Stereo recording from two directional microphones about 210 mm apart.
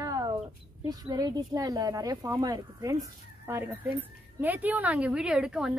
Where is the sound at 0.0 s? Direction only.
15° right (ahead or behind).